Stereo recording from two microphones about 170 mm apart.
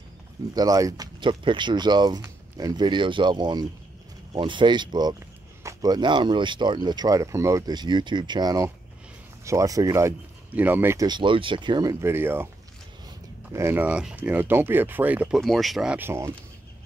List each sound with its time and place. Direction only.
0.6 s speech: 20° right (ahead or behind)
11.1 s speech: 30° right (ahead or behind); by 12.4 s 15° right (ahead or behind)
13.5 s speech: 15° right (ahead or behind)